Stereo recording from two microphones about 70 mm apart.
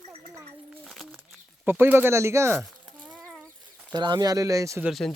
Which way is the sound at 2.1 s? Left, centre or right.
Right.